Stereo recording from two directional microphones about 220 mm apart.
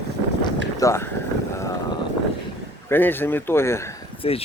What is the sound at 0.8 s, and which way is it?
Speech, 10° left (ahead or behind).